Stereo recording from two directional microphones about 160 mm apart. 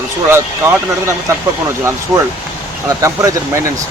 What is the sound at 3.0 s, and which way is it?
Speech, 20° right (ahead or behind).